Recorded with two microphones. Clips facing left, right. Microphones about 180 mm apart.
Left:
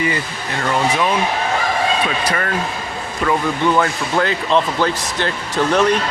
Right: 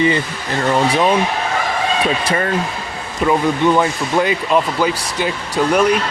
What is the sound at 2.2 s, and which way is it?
Speech, 25° right (ahead or behind).